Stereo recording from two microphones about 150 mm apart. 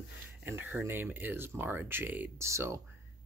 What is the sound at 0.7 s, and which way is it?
Speech, 15° right (ahead or behind).